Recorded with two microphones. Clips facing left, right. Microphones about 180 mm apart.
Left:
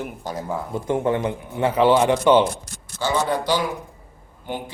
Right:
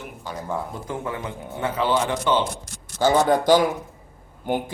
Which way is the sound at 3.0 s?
45° right (ahead or behind).